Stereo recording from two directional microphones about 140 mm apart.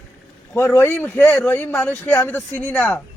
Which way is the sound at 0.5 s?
15° left (ahead or behind).